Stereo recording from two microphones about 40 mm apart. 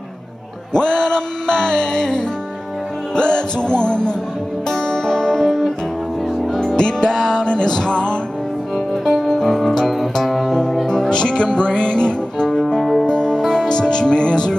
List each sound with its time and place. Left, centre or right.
0.7 s music: centre
6.8 s music: centre
8.7 s music: centre
11.1 s music: left